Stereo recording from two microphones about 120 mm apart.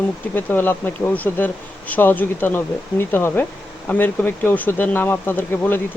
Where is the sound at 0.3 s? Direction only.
15° left (ahead or behind).